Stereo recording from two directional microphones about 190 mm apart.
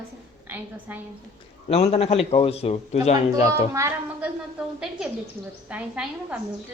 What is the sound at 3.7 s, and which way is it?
Speech, 15° right (ahead or behind).